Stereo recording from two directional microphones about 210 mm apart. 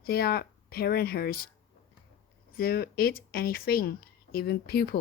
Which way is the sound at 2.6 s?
45° left (ahead or behind).